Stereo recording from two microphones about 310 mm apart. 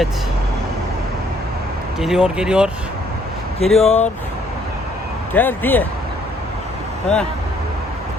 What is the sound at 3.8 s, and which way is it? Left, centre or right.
Speech, left.